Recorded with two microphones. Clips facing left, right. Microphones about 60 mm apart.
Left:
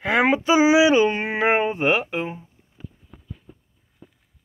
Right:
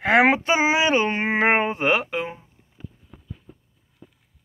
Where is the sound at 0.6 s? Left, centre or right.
Right.